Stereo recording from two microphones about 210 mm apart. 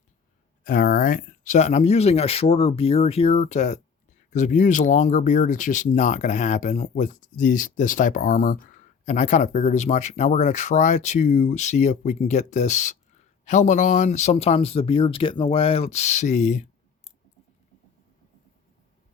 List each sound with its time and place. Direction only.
0.6 s speech: 45° left (ahead or behind)